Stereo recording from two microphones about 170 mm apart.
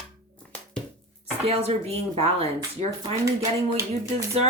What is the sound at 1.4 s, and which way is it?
Speech, 35° right (ahead or behind).